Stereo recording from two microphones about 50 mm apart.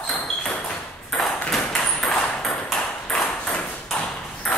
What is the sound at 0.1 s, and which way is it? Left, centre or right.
Ping, centre.